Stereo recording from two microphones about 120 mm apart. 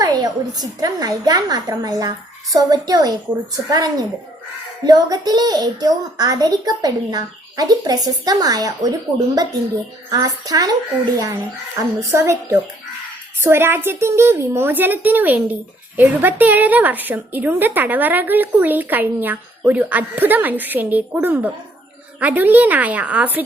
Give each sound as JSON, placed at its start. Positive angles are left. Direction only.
{"t": 0.0, "sound": "a child's voice", "side_deg": -35}
{"t": 11.8, "sound": "a woman's voice", "side_deg": -25}